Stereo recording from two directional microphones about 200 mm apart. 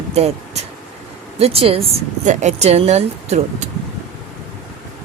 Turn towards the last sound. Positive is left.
turn(degrees=-35)  # may be behind; listen again after turning